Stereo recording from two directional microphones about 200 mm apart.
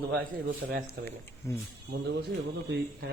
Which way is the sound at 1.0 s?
10° left (ahead or behind).